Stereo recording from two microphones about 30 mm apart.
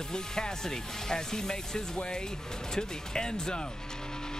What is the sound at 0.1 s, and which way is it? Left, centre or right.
Speech, left.